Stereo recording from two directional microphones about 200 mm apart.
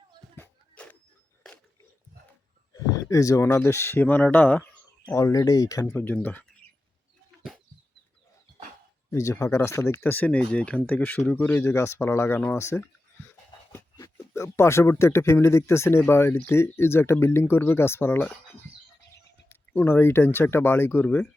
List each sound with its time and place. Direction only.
0.3 s a sound: 10° left (ahead or behind)
2.7 s speech: 15° left (ahead or behind)
9.1 s speech: 15° left (ahead or behind)
19.5 s speech: 10° left (ahead or behind)